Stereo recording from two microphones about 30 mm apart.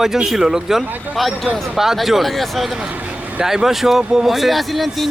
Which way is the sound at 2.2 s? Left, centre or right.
Centre.